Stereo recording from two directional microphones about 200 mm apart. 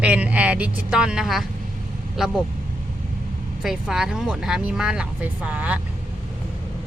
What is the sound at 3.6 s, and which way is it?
Speech, 5° right (ahead or behind).